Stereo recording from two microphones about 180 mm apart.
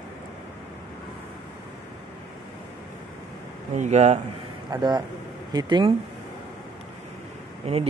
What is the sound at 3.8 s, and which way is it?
Speech, 40° right (ahead or behind).